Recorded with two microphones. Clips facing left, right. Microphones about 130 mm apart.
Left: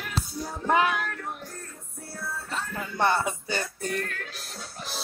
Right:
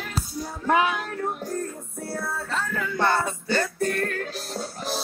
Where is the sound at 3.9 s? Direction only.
45° right (ahead or behind).